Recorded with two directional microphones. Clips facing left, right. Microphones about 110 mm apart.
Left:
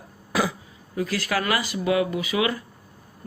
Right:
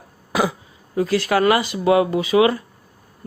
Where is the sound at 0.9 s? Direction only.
25° right (ahead or behind).